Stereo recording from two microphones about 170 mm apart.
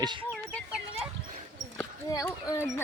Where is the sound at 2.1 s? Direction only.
20° left (ahead or behind).